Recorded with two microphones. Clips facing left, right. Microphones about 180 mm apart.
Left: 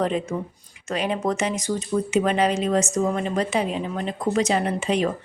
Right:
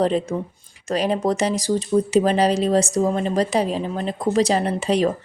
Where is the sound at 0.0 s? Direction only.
35° right (ahead or behind).